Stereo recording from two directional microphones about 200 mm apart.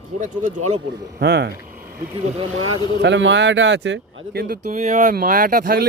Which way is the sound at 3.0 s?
65° right (ahead or behind).